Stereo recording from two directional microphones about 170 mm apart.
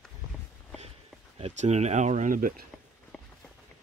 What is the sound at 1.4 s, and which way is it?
Speech, 40° right (ahead or behind).